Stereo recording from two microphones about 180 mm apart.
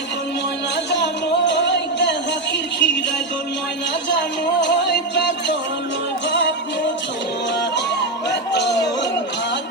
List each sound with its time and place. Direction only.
0.9 s music: 75° left (ahead or behind)
4.6 s music: 75° left (ahead or behind)
8.3 s music: 75° left (ahead or behind)